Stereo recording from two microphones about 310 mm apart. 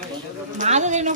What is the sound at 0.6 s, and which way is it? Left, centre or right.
Speech, right.